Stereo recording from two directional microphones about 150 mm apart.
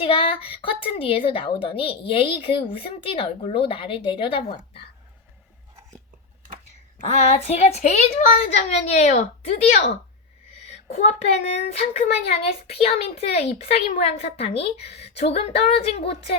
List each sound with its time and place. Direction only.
0.0 s a woman's voice: 35° left (ahead or behind)
7.1 s speech: 45° left (ahead or behind)